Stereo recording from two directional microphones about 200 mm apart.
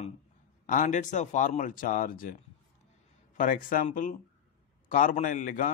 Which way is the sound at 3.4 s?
40° left (ahead or behind).